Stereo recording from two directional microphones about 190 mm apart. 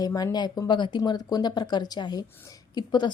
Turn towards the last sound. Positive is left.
turn(degrees=25)  # may be behind; listen again after turning